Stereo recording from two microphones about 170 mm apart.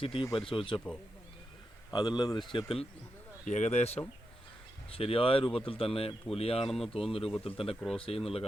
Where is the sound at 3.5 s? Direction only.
45° left (ahead or behind).